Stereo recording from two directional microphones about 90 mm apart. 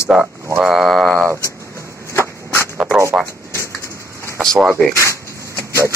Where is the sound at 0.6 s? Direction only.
Centre (ahead or behind).